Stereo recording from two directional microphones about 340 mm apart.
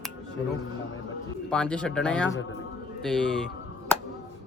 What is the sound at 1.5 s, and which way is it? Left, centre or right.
A man's voice, centre.